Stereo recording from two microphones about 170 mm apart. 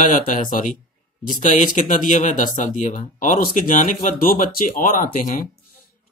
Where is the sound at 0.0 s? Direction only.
50° left (ahead or behind).